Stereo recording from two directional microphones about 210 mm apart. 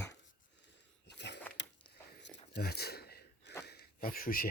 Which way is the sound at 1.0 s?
55° left (ahead or behind).